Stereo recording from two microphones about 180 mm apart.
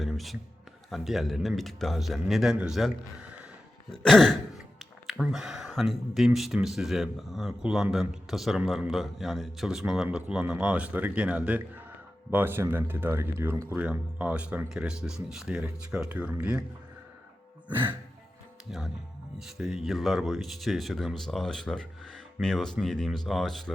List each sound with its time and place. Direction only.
0.0 s a sound: centre (ahead or behind)
0.9 s speech: centre (ahead or behind)
17.7 s music: 10° right (ahead or behind)
18.7 s speech: 5° right (ahead or behind)